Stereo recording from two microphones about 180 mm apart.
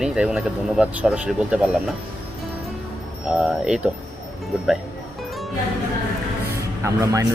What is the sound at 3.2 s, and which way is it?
Speech, 5° right (ahead or behind).